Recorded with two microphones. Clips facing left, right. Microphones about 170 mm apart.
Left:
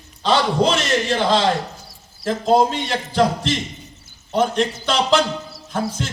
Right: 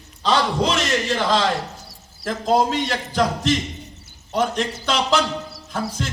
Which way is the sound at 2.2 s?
35° left (ahead or behind).